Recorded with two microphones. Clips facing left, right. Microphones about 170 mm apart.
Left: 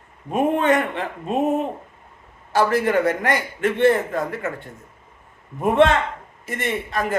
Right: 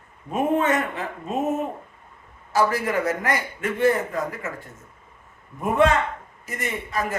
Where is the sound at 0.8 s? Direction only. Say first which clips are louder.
Left 3 dB; 65° left (ahead or behind).